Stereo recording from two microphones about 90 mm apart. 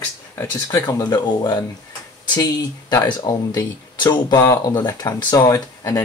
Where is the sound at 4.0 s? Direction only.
55° left (ahead or behind).